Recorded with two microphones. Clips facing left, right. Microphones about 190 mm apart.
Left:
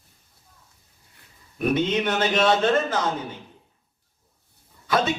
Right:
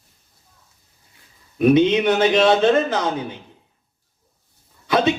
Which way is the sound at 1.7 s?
15° right (ahead or behind).